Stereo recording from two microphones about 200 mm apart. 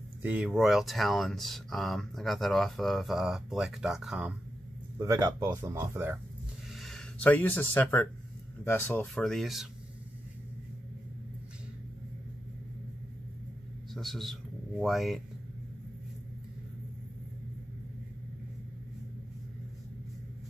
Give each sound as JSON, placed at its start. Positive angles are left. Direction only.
{"t": 0.2, "sound": "speech", "side_deg": -5}
{"t": 4.9, "sound": "speech", "side_deg": -15}
{"t": 6.7, "sound": "speech", "side_deg": 0}
{"t": 13.9, "sound": "speech", "side_deg": 0}